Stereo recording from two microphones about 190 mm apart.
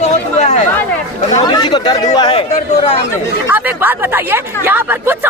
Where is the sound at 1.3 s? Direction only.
20° left (ahead or behind).